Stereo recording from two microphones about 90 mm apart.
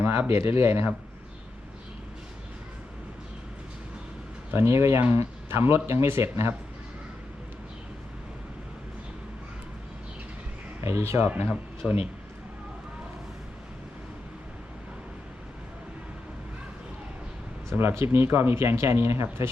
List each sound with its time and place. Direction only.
0.0 s speech: 25° right (ahead or behind)
4.5 s speech: 30° right (ahead or behind)
10.8 s speech: 30° right (ahead or behind)
11.8 s speech: centre (ahead or behind)
17.7 s speech: 30° right (ahead or behind)